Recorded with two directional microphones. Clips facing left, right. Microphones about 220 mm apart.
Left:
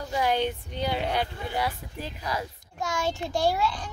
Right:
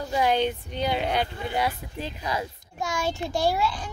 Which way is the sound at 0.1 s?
20° right (ahead or behind).